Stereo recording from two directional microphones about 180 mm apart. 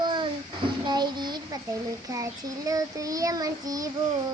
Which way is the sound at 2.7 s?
20° right (ahead or behind).